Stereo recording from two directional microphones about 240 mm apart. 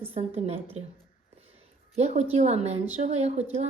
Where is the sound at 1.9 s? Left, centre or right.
Right.